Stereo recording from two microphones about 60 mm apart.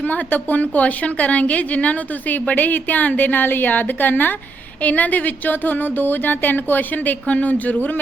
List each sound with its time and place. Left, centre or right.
0.0 s a woman's voice: left